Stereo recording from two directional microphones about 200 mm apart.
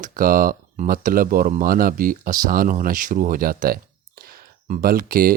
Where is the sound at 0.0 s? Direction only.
45° right (ahead or behind).